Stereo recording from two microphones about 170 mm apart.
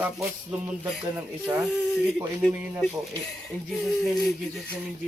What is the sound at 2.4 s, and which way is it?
Speech, 5° left (ahead or behind).